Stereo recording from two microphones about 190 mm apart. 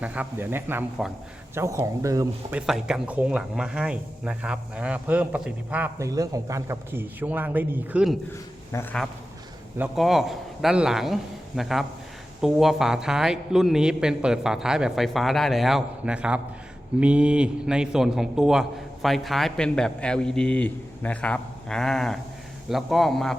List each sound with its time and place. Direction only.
0.0 s speech: 5° right (ahead or behind)
2.6 s speech: 5° right (ahead or behind)
8.3 s speech: 10° left (ahead or behind)
9.7 s a man's voice: 5° right (ahead or behind)